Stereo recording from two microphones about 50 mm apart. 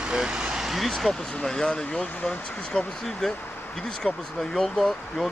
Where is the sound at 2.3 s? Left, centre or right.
Centre.